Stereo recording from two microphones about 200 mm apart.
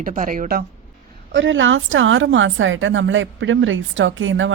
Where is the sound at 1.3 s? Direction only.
70° right (ahead or behind).